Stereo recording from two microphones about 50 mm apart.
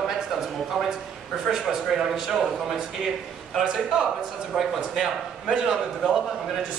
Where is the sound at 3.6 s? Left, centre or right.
Centre.